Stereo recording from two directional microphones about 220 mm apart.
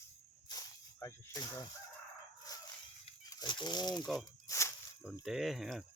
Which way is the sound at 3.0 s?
15° left (ahead or behind).